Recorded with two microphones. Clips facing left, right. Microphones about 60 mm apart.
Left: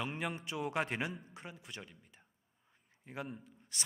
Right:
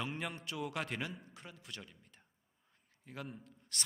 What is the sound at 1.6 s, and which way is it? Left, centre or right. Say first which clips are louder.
A man's voice: left 1 dB; centre.